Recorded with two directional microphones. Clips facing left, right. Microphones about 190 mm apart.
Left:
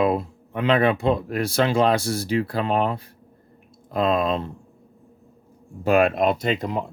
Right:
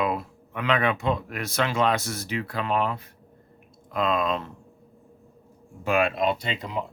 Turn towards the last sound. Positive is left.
turn(degrees=45)  # may be behind; listen again after turning